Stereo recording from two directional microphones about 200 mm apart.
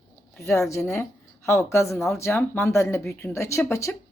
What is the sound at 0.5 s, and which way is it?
Speech, 15° left (ahead or behind).